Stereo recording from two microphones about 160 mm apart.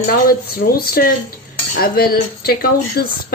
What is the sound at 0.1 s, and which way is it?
Speech, 70° left (ahead or behind).